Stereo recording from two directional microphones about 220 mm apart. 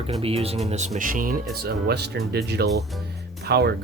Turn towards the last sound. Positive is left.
turn(degrees=-45)  # may be behind; listen again after turning